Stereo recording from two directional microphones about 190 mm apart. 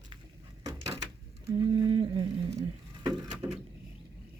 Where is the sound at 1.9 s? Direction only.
30° right (ahead or behind).